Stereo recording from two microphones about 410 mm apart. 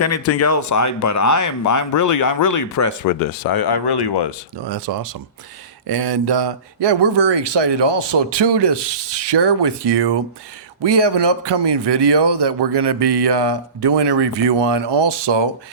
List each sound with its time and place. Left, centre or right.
0.0 s speech: left
4.6 s speech: right
5.9 s speech: right